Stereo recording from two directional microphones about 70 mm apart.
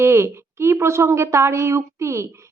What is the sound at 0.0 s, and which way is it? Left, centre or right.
A woman's voice, right.